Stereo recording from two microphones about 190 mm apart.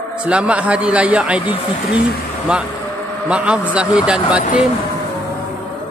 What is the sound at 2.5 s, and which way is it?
Speech, 5° right (ahead or behind).